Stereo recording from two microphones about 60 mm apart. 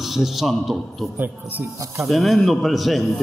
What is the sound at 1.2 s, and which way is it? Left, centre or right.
Speech, right.